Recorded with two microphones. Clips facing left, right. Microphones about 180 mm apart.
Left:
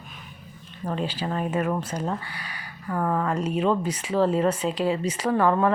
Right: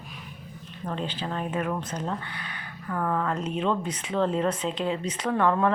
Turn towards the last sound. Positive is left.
turn(degrees=5)  # may be behind; listen again after turning